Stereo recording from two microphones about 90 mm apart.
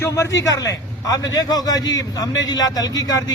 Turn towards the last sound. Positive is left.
turn(degrees=45)  # may be behind; listen again after turning